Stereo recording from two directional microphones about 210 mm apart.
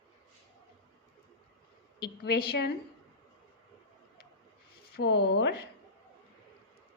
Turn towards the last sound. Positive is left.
turn(degrees=50)  # may be behind; listen again after turning